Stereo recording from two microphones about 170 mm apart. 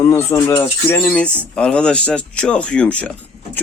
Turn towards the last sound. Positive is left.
turn(degrees=5)  # may be behind; listen again after turning